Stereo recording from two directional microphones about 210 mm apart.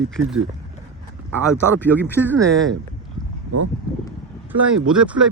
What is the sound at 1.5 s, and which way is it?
Speech, 10° left (ahead or behind).